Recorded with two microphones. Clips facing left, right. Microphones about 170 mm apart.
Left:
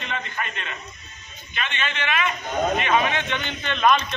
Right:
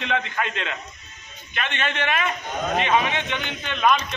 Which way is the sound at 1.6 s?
60° right (ahead or behind).